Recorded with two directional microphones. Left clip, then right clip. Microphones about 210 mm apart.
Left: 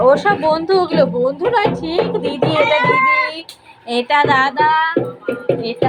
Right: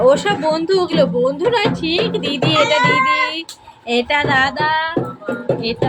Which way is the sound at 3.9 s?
5° right (ahead or behind).